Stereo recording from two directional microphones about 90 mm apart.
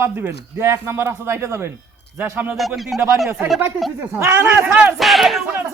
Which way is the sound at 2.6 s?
Centre (ahead or behind).